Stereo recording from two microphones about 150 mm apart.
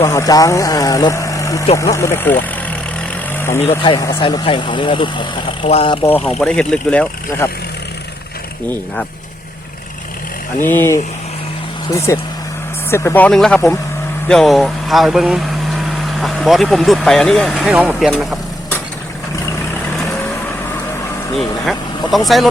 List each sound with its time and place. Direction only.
0.0 s speech: 25° left (ahead or behind)
3.3 s vehicle: 15° left (ahead or behind)
3.8 s speech: 25° left (ahead or behind); by 6.0 s 40° left (ahead or behind)
6.0 s speech: 15° left (ahead or behind)
10.6 s speech: 15° left (ahead or behind)
21.6 s speech: centre (ahead or behind)